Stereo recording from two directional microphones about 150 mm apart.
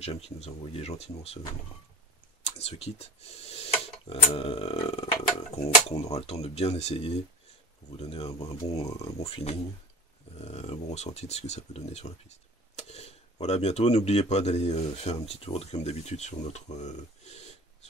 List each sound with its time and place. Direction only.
0.0 s speech: 45° left (ahead or behind)
2.4 s speech: 45° left (ahead or behind)